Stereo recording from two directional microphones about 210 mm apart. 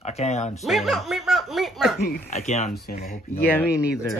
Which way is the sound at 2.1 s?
35° left (ahead or behind).